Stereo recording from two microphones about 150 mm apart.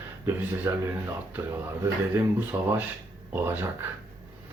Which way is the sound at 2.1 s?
10° right (ahead or behind).